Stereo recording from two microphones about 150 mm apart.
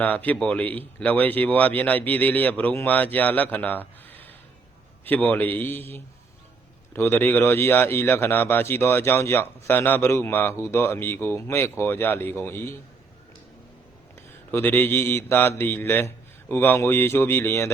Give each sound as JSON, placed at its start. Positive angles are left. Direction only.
{"t": 0.0, "sound": "a man's voice", "side_deg": 10}
{"t": 14.5, "sound": "a man's voice", "side_deg": 15}